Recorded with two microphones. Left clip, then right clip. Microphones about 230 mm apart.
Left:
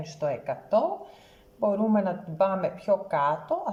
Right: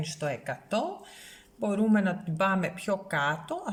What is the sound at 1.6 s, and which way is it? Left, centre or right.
A woman's voice, right.